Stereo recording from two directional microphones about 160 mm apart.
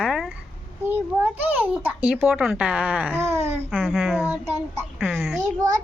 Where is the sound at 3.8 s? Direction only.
5° right (ahead or behind).